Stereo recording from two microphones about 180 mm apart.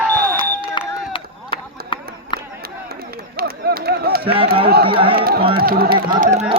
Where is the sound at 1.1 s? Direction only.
30° left (ahead or behind).